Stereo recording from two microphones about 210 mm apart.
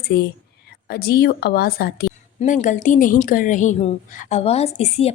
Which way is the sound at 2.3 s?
35° left (ahead or behind).